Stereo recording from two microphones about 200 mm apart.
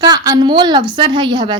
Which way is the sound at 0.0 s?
20° right (ahead or behind).